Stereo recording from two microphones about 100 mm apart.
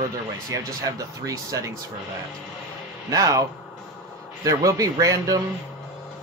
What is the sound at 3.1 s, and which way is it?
Speech, 35° right (ahead or behind).